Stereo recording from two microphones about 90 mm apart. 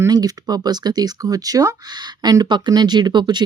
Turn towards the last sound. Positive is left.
turn(degrees=-55)  # may be behind; listen again after turning